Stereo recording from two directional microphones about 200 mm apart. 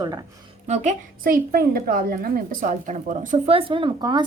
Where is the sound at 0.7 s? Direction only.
35° right (ahead or behind).